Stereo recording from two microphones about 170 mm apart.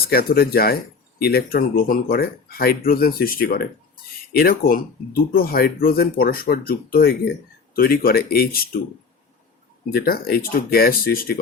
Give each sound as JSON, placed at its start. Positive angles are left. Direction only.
{"t": 0.0, "sound": "speech", "side_deg": 65}
{"t": 9.9, "sound": "speech", "side_deg": 60}